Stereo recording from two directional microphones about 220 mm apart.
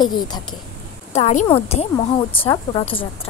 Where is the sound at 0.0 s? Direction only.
20° left (ahead or behind).